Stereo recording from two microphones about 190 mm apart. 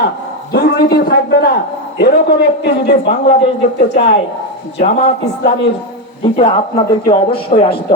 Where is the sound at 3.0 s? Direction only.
30° left (ahead or behind).